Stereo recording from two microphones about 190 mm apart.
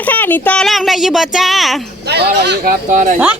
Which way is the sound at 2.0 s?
60° right (ahead or behind).